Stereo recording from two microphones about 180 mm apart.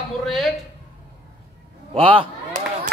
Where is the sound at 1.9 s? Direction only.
30° right (ahead or behind).